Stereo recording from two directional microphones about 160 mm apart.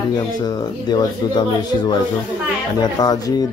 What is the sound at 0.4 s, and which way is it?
Speech, 25° left (ahead or behind).